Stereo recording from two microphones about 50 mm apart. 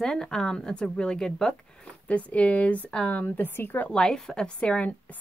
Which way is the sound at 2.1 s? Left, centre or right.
Left.